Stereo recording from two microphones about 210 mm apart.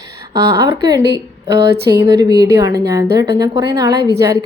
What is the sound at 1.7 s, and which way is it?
Speech, 50° right (ahead or behind).